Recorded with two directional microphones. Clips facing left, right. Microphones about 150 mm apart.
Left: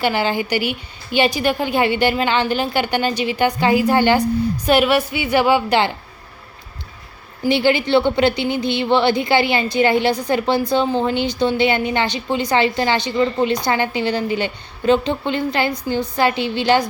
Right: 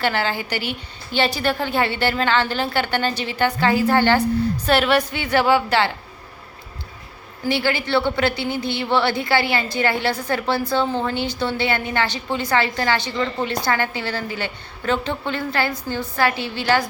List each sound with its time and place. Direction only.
0.0 s a woman's voice: 15° left (ahead or behind)
7.4 s a woman's voice: 20° left (ahead or behind)